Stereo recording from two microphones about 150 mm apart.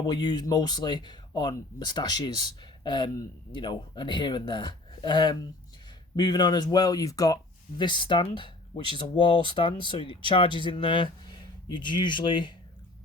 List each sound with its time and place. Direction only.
0.0 s speech: 30° left (ahead or behind)